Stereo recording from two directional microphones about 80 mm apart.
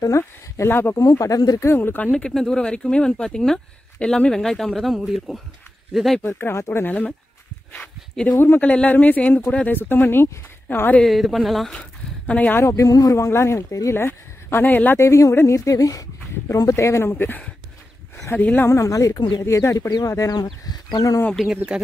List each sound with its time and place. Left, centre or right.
0.2 s speech: left
0.9 s speech: left
1.6 s speech: left
2.1 s speech: centre
6.3 s speech: left
7.7 s speech: centre
8.4 s speech: left
11.1 s speech: centre; by 12.6 s left
12.6 s speech: left
15.0 s speech: left
17.1 s speech: left
18.7 s speech: left
21.5 s speech: centre